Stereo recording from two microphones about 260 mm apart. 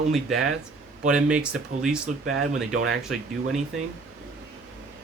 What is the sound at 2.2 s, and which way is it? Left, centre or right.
Speech, right.